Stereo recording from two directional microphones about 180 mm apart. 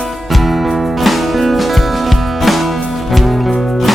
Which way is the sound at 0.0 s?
Centre (ahead or behind).